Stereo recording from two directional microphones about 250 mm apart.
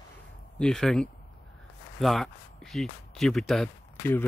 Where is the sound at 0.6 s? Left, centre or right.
Centre.